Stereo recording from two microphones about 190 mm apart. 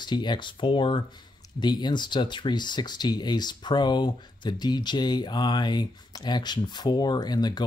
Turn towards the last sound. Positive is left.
turn(degrees=20)  # may be behind; listen again after turning